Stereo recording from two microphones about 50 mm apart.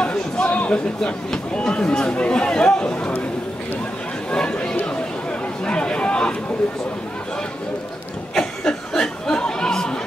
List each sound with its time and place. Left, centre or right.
0.0 s speech: left
4.3 s chatter: centre
8.4 s chatter: centre